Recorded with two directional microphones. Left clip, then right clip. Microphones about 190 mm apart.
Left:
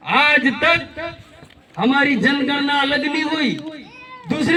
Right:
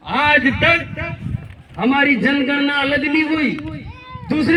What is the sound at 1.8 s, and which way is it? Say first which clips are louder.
A man's voice: right 1 dB; 15° left (ahead or behind).